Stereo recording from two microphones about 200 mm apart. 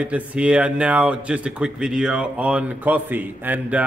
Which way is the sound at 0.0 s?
5° right (ahead or behind).